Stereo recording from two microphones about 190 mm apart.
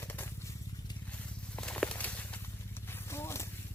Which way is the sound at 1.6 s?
5° left (ahead or behind).